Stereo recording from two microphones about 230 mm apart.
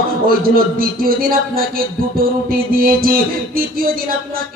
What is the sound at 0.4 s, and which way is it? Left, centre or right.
Music, right.